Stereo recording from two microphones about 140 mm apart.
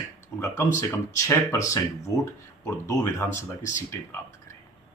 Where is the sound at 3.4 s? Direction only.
20° left (ahead or behind).